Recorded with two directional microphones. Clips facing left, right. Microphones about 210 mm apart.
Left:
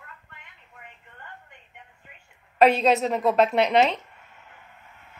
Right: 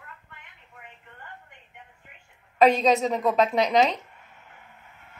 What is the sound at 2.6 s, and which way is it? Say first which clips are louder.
A woman's voice: even; centre (ahead or behind).